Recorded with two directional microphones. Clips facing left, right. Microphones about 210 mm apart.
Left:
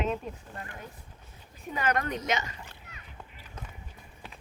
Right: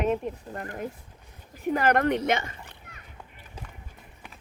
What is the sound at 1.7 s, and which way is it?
Speech, 65° right (ahead or behind).